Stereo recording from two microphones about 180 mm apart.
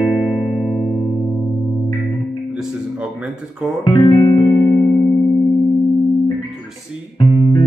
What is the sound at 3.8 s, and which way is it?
Music, 30° left (ahead or behind).